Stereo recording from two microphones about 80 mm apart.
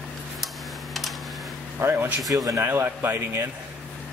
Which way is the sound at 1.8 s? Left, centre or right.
Right.